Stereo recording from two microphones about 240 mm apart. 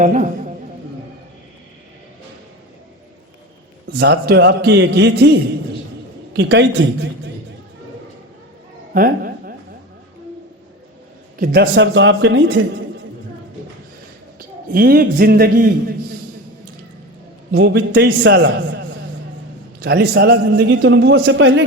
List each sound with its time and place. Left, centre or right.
0.0 s music: right
3.9 s a man's voice: right
8.9 s a sound: right
11.3 s a man's voice: right
14.3 s a man's voice: right
17.5 s a man's voice: right
19.8 s a man's voice: right